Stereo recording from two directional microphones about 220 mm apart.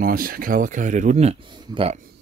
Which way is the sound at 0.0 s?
40° right (ahead or behind).